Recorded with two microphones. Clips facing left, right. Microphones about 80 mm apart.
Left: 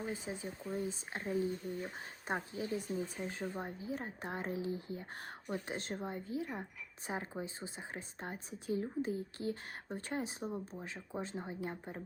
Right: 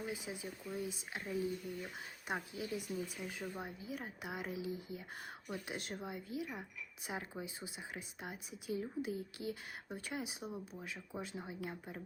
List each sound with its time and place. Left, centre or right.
0.0 s speech: left